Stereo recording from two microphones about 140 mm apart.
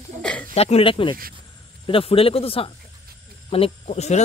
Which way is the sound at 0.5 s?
45° left (ahead or behind).